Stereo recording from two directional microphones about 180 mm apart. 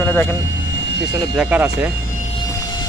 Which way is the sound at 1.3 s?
10° right (ahead or behind).